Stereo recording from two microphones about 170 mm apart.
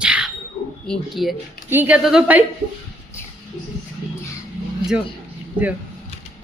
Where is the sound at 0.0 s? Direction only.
5° right (ahead or behind).